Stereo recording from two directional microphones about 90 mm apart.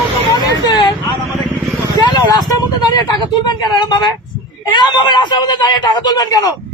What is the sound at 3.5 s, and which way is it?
Speech, 55° left (ahead or behind).